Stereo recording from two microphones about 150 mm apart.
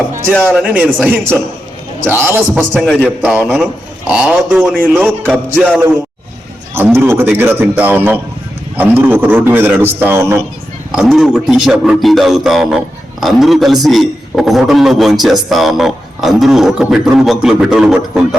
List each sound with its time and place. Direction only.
0.5 s a man's voice: 10° right (ahead or behind)
2.6 s a man's voice: 5° left (ahead or behind)
3.2 s a man's voice: 5° right (ahead or behind)
4.8 s a man's voice: 15° right (ahead or behind)
6.7 s a man's voice: 15° right (ahead or behind)
10.9 s a man's voice: centre (ahead or behind)